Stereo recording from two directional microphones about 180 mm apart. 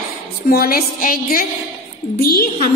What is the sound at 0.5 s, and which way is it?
A woman's voice, 55° left (ahead or behind).